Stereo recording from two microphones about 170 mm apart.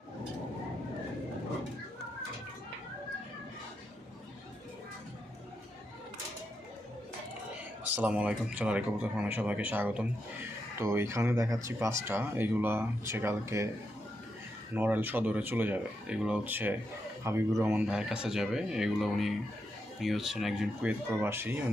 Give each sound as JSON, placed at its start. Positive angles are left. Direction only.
{"t": 7.9, "sound": "speech", "side_deg": -10}
{"t": 14.8, "sound": "speech", "side_deg": -10}